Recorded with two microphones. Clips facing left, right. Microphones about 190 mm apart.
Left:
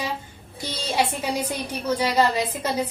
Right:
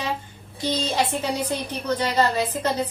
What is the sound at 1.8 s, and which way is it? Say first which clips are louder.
Speech: left 1 dB; 10° left (ahead or behind).